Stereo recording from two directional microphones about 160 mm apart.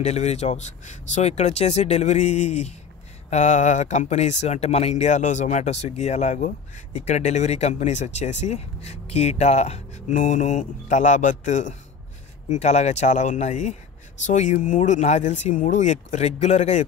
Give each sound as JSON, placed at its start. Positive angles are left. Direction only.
{"t": 0.0, "sound": "speech", "side_deg": 45}